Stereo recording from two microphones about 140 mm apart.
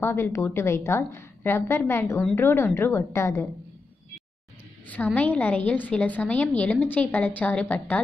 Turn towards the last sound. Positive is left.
turn(degrees=10)  # may be behind; listen again after turning